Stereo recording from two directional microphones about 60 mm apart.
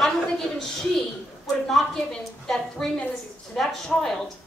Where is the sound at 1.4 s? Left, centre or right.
Centre.